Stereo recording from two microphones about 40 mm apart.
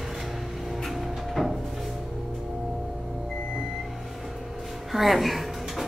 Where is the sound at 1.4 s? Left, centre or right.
Centre.